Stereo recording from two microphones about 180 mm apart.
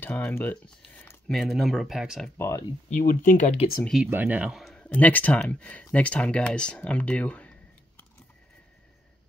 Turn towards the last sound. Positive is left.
turn(degrees=5)  # may be behind; listen again after turning